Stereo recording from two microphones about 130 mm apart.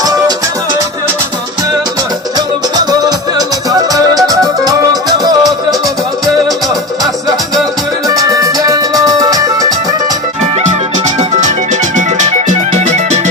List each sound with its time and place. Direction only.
2.7 s music: 30° right (ahead or behind)
5.0 s music: 30° right (ahead or behind)
8.0 s music: 25° right (ahead or behind)
10.4 s music: 60° right (ahead or behind)